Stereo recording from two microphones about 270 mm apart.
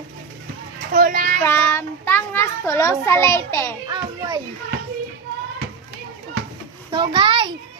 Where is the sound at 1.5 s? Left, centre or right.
Centre.